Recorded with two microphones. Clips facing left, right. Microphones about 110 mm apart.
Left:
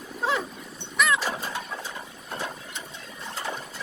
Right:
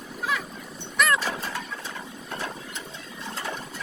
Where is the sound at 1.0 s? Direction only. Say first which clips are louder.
Right 1 dB; centre (ahead or behind).